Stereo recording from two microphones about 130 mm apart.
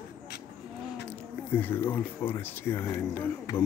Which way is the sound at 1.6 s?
15° left (ahead or behind).